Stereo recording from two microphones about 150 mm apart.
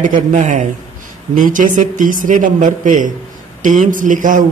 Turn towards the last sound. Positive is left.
turn(degrees=-60)  # may be behind; listen again after turning